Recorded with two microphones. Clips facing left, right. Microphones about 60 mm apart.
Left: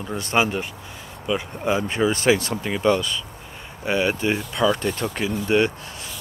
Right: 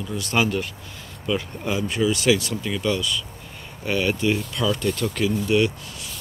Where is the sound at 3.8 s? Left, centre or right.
Left.